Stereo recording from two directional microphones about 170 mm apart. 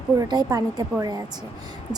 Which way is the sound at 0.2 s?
25° right (ahead or behind).